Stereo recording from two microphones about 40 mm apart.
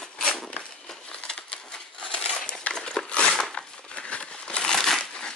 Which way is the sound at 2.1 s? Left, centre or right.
Left.